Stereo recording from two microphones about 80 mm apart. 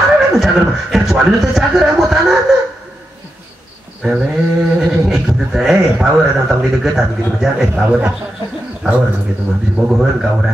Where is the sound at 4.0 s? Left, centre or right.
Centre.